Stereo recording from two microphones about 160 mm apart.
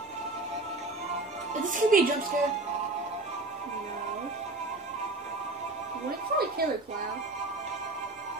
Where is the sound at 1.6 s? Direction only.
55° right (ahead or behind).